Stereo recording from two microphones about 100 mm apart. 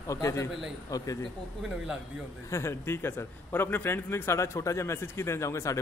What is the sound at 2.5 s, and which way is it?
A man's voice, 30° left (ahead or behind).